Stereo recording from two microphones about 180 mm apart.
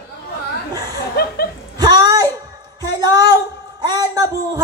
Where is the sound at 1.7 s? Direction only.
20° right (ahead or behind).